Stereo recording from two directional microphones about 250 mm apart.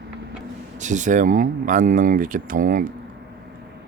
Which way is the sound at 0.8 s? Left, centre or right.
Right.